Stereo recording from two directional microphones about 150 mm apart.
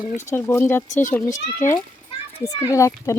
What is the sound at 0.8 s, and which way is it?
Speech, 55° left (ahead or behind).